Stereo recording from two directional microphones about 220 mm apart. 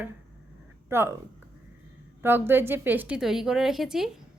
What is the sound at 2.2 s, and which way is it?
A woman's voice, 10° right (ahead or behind).